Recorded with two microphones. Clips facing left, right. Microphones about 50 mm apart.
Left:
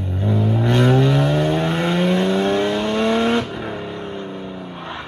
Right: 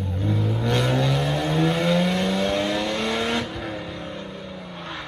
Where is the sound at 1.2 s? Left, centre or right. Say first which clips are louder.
Left 4 dB; left.